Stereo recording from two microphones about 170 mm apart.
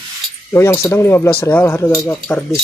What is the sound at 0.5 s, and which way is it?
Speech, 15° left (ahead or behind).